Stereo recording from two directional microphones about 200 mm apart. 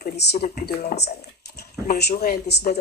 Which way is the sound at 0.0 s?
50° left (ahead or behind).